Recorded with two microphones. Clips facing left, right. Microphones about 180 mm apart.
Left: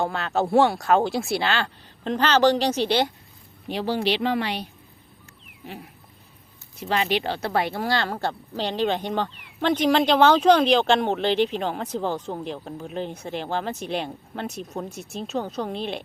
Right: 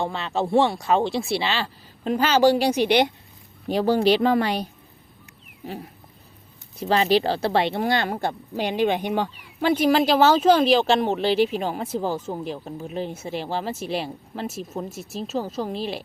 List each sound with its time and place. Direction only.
0.0 s speech: centre (ahead or behind); by 3.1 s 15° right (ahead or behind)
3.7 s speech: 45° right (ahead or behind)
5.6 s dog: 40° right (ahead or behind)
6.7 s speech: 35° right (ahead or behind); by 16.0 s centre (ahead or behind)